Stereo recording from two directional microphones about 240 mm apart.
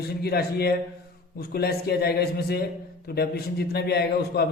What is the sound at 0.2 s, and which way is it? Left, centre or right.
A man's voice, left.